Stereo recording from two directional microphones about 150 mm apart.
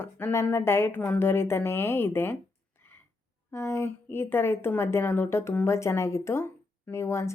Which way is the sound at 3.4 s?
15° left (ahead or behind).